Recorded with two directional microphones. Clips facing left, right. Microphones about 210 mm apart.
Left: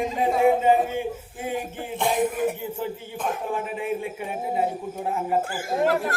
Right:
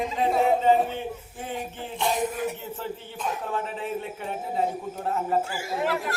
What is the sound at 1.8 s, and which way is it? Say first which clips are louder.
Speech: left 3 dB; 55° left (ahead or behind).